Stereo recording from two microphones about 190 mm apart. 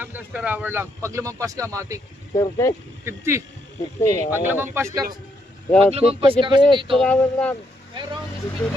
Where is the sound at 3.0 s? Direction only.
15° right (ahead or behind).